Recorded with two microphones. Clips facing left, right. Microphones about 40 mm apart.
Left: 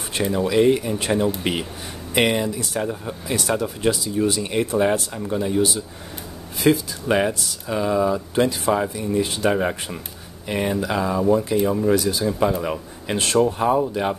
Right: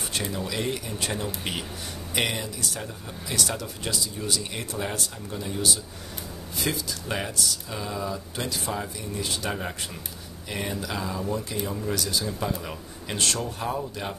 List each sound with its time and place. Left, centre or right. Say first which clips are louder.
0.1 s speech: left 12 dB; left